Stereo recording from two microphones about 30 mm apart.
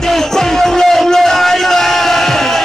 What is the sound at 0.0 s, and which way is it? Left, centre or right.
Music, centre.